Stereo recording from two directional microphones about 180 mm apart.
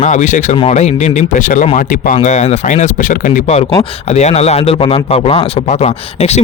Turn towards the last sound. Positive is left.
turn(degrees=35)  # may be behind; listen again after turning